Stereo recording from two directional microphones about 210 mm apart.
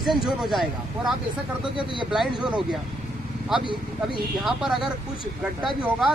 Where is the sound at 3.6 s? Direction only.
25° right (ahead or behind).